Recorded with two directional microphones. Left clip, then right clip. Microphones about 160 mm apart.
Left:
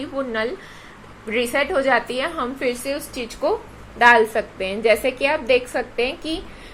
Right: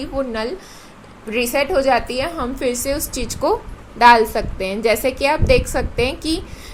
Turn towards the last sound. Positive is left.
turn(degrees=-35)  # may be behind; listen again after turning